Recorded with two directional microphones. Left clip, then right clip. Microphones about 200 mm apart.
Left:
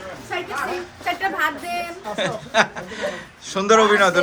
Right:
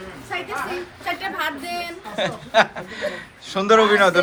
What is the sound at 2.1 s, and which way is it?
A man's voice, 5° left (ahead or behind).